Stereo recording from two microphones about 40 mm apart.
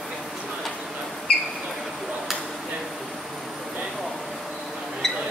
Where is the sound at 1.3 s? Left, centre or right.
Left.